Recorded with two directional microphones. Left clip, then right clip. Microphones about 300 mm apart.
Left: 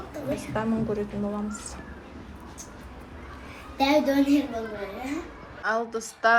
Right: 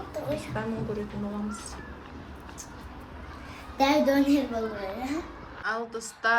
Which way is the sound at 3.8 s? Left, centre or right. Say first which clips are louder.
Left 1 dB; right.